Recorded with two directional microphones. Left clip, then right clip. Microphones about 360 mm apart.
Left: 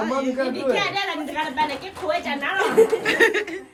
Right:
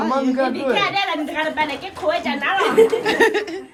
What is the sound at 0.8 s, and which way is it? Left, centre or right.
Speech, centre.